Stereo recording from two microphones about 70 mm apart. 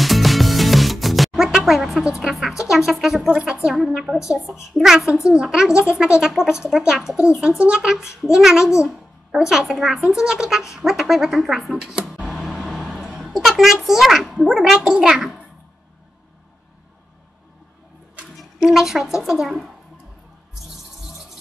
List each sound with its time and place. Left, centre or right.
0.0 s music: centre
2.7 s speech: centre
3.3 s a woman's voice: centre
3.6 s a child's voice: centre
12.3 s a sound: centre
13.8 s a woman's voice: centre
18.4 s a woman's voice: centre